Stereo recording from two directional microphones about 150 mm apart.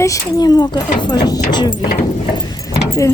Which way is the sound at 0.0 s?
20° left (ahead or behind).